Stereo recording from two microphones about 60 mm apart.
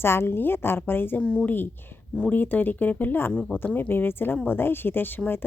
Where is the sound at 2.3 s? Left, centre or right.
Left.